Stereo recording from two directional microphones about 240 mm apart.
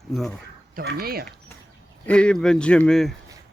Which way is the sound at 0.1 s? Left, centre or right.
Centre.